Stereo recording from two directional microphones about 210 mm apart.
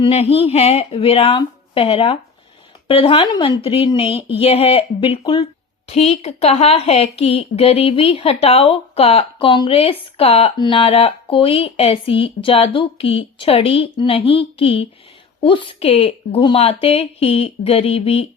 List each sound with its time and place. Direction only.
0.0 s a woman's voice: 30° left (ahead or behind)